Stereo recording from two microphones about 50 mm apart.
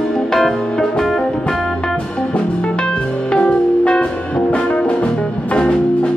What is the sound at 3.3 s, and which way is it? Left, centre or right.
Music, left.